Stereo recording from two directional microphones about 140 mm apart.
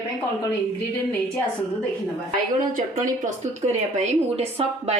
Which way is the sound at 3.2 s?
55° right (ahead or behind).